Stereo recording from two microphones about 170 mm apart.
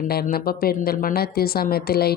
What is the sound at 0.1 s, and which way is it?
Speech, 65° left (ahead or behind).